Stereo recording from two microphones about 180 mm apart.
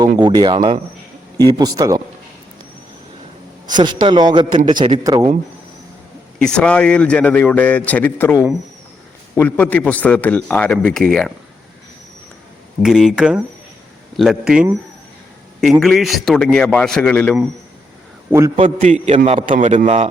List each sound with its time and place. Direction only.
0.2 s a man's voice: 25° right (ahead or behind)
3.7 s a man's voice: 25° right (ahead or behind)
6.4 s a man's voice: 5° left (ahead or behind)
12.8 s a man's voice: 5° right (ahead or behind)
15.8 s a man's voice: centre (ahead or behind)
18.3 s a man's voice: 15° right (ahead or behind)
18.5 s a man's voice: 35° right (ahead or behind)